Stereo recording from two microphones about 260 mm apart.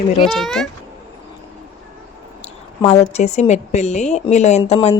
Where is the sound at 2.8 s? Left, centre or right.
Left.